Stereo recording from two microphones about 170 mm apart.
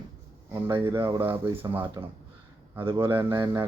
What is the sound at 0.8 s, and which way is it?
Speech, 15° right (ahead or behind).